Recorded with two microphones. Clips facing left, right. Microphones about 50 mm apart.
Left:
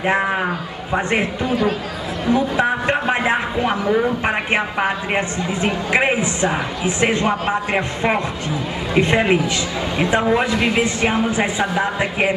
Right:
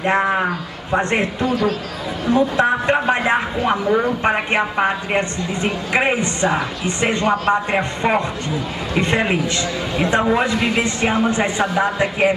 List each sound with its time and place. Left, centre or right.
0.0 s a woman's voice: centre
1.5 s speech: centre
2.3 s a woman's voice: centre